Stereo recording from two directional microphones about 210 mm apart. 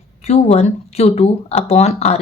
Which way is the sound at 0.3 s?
30° left (ahead or behind).